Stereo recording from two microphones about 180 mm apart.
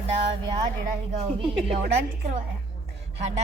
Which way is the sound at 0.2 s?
25° right (ahead or behind).